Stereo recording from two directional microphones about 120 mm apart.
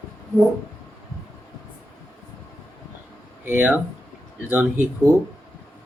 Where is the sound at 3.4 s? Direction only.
15° right (ahead or behind).